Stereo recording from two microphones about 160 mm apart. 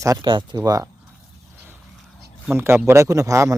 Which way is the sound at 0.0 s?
25° right (ahead or behind).